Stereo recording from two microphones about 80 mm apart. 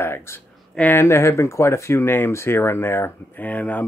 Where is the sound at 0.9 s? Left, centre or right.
Left.